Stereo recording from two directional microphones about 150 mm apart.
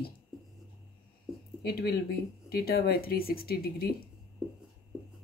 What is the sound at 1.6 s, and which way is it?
Speech, 90° left.